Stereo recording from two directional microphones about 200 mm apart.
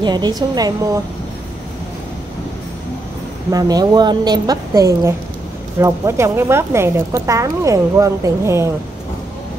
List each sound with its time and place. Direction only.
0.0 s a woman's voice: 20° right (ahead or behind)
3.5 s a woman's voice: 20° right (ahead or behind)